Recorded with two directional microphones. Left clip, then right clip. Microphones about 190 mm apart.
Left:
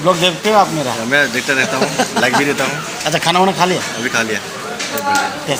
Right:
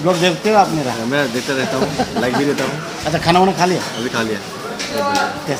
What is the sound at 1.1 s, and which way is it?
Speech, 15° right (ahead or behind).